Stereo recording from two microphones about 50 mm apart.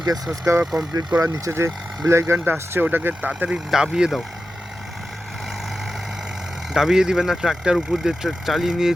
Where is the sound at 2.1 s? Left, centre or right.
Right.